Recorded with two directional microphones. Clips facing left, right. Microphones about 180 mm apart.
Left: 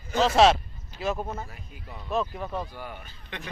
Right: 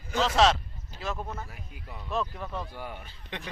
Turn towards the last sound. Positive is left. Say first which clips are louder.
# even
turn(degrees=-25)  # may be behind; listen again after turning